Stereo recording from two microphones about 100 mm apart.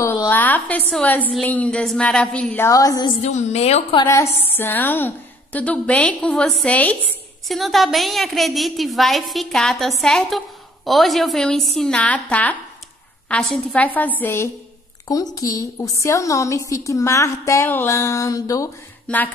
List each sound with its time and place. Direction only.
0.3 s a woman's voice: 15° left (ahead or behind)
2.7 s a woman's voice: 35° left (ahead or behind)
3.2 s a woman's voice: 90° left
4.1 s a woman's voice: 25° left (ahead or behind)
7.4 s a woman's voice: centre (ahead or behind)
13.8 s a woman's voice: 15° left (ahead or behind)
15.0 s a woman's voice: 35° left (ahead or behind)
19.0 s a woman's voice: 15° left (ahead or behind)